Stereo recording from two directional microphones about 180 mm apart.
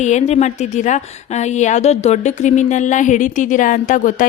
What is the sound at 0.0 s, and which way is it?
A woman's voice, 40° left (ahead or behind).